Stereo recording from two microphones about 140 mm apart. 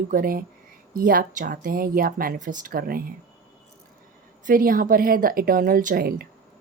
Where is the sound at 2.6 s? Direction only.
90° right.